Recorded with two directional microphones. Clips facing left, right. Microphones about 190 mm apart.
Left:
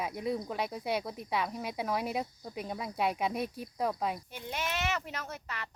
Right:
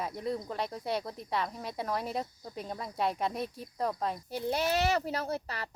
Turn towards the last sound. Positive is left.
turn(degrees=-35)  # may be behind; listen again after turning